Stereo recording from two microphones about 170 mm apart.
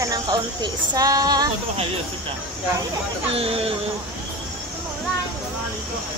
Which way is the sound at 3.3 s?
35° right (ahead or behind).